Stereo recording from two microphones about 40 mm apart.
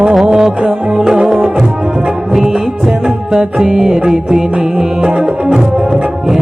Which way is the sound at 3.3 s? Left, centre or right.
Centre.